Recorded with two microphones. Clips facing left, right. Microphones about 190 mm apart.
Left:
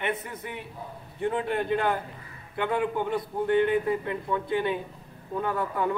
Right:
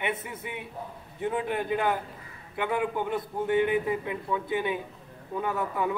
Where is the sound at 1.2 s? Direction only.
5° right (ahead or behind).